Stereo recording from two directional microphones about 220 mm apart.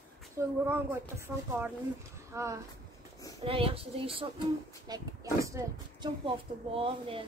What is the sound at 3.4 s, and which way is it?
A woman's voice, 25° right (ahead or behind).